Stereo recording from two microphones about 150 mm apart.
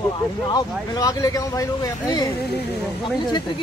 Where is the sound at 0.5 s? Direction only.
25° left (ahead or behind).